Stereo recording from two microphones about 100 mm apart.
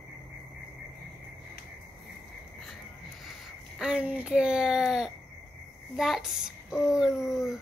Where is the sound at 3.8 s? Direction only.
10° right (ahead or behind).